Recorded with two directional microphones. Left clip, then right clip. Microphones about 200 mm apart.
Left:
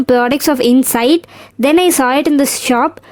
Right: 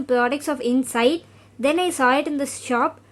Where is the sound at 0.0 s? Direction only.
45° left (ahead or behind).